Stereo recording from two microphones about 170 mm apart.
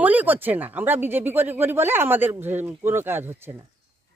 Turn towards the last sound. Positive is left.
turn(degrees=-15)  # may be behind; listen again after turning